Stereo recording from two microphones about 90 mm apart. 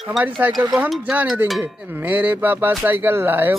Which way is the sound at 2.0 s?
20° right (ahead or behind).